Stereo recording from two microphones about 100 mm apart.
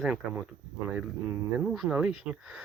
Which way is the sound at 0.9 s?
15° right (ahead or behind).